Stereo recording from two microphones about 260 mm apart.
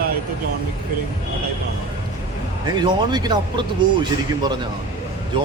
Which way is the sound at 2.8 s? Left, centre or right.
Centre.